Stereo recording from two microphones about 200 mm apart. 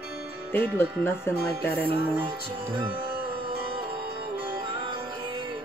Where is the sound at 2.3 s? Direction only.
25° right (ahead or behind).